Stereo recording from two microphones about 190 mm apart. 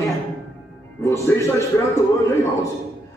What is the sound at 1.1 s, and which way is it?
A man's voice, 15° left (ahead or behind).